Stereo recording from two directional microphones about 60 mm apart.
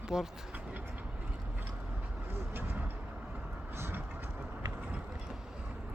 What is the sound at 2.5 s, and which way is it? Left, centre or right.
Vehicle, right.